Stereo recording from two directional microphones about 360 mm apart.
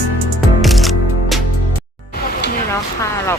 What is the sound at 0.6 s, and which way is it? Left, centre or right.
Music, centre.